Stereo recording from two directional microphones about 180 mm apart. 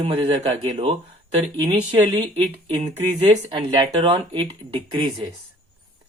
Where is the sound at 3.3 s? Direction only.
25° right (ahead or behind).